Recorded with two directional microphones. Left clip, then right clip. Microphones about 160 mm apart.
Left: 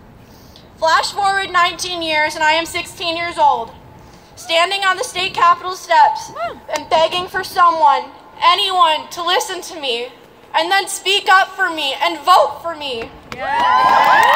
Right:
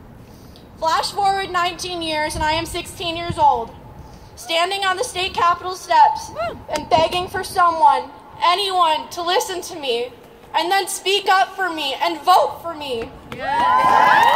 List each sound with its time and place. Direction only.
0.7 s a woman's voice: 50° right (ahead or behind)
13.4 s speech: 15° left (ahead or behind)